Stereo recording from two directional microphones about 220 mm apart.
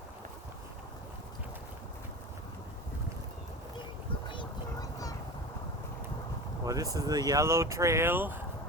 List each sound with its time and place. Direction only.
4.3 s vehicle: 20° left (ahead or behind)
6.7 s speech: 15° right (ahead or behind)